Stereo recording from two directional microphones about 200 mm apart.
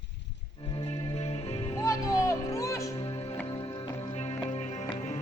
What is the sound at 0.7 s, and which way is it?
Music, 30° left (ahead or behind).